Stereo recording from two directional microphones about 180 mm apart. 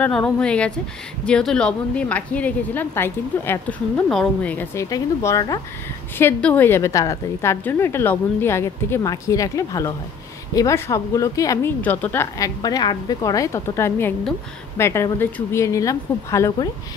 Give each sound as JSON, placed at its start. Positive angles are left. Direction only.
{"t": 0.0, "sound": "a woman's voice", "side_deg": 5}